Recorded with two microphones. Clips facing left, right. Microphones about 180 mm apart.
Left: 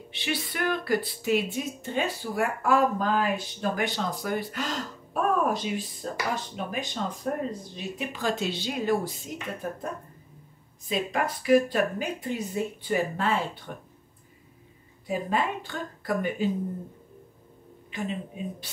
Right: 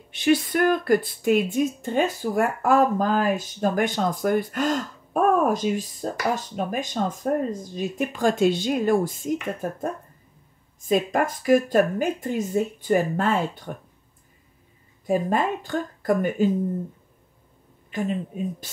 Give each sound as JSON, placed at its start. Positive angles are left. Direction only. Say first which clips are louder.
{"t": 0.1, "sound": "speech", "louder": "right 12 dB", "side_deg": -45}
{"t": 10.9, "sound": "speech", "louder": "right 6 dB", "side_deg": -45}
{"t": 15.0, "sound": "speech", "louder": "right 5 dB", "side_deg": -45}
{"t": 17.9, "sound": "speech", "louder": "right 6 dB", "side_deg": -45}